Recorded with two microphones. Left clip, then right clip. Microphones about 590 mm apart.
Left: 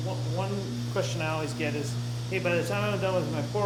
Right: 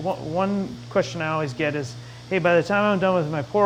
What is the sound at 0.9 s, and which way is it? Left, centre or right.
Speech, right.